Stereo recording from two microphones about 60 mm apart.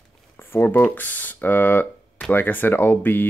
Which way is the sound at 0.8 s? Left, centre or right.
Left.